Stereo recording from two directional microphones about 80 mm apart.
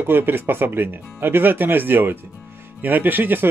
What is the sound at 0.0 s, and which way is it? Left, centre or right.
Speech, right.